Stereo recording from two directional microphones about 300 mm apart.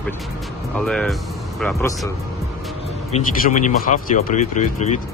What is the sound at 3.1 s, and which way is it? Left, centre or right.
Speech, left.